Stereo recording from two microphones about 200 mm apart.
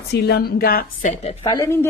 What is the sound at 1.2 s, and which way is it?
Speech, 30° left (ahead or behind).